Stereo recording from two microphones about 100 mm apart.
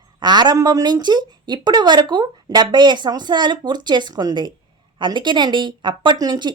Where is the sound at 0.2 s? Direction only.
45° right (ahead or behind).